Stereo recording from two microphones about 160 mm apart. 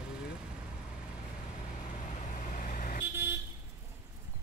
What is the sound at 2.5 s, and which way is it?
Vehicle, 55° left (ahead or behind).